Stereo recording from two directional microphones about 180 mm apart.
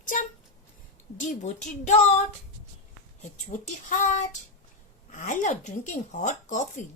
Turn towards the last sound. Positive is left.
turn(degrees=45)  # may be behind; listen again after turning